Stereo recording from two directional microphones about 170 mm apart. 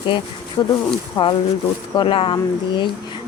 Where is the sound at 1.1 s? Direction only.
30° left (ahead or behind).